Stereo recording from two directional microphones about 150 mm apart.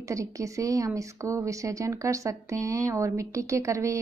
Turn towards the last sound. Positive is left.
turn(degrees=-20)  # may be behind; listen again after turning